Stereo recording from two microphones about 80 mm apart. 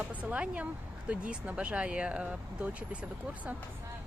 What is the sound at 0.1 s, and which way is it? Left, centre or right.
Speech, centre.